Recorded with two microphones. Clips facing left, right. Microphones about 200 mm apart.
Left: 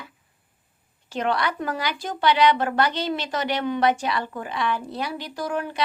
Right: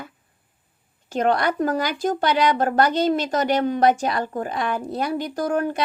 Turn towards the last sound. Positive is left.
turn(degrees=-45)  # may be behind; listen again after turning